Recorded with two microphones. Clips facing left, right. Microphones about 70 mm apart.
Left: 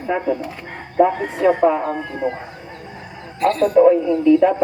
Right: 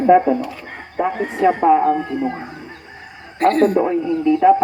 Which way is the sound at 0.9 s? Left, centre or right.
Centre.